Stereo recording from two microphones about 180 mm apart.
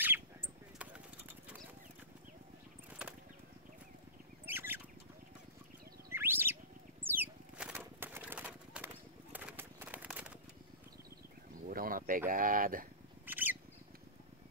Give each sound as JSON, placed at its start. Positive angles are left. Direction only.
{"t": 2.9, "sound": "a sound", "side_deg": -5}
{"t": 4.5, "sound": "rodents", "side_deg": -10}
{"t": 6.1, "sound": "bird", "side_deg": -10}
{"t": 11.7, "sound": "a sound", "side_deg": -50}
{"t": 12.3, "sound": "speech", "side_deg": -50}
{"t": 13.2, "sound": "squawk", "side_deg": -10}